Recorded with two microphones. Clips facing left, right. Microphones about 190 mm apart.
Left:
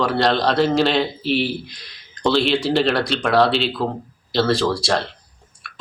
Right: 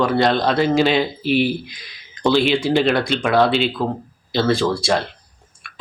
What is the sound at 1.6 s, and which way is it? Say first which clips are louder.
A man's voice: right 1 dB; centre (ahead or behind).